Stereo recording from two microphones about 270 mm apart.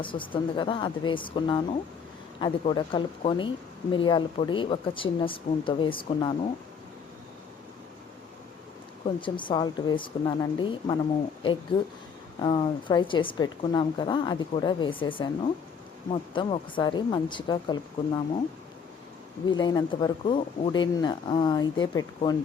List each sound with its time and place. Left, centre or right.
0.0 s a woman's voice: centre
9.2 s a woman's voice: centre
12.4 s a woman's voice: centre
19.5 s a woman's voice: centre